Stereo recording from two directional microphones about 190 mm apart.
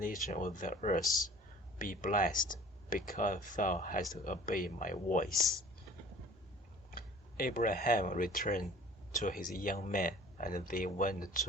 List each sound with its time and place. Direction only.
0.0 s speech: 45° left (ahead or behind)
6.9 s speech: 50° left (ahead or behind)